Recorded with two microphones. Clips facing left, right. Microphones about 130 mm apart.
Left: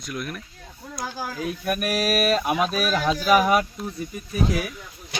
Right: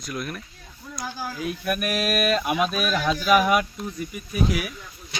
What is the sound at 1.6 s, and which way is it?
Speech, 40° left (ahead or behind).